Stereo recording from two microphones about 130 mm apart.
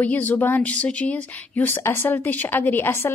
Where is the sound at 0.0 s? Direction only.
15° left (ahead or behind).